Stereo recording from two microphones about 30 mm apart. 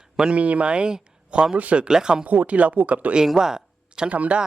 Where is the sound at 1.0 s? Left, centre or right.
Right.